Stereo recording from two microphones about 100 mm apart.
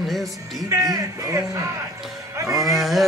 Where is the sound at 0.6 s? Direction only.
35° right (ahead or behind).